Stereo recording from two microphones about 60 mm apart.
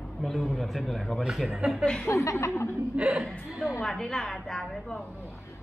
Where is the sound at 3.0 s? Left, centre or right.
Right.